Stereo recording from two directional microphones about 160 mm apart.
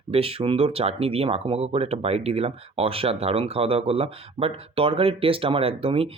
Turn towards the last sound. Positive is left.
turn(degrees=-35)  # may be behind; listen again after turning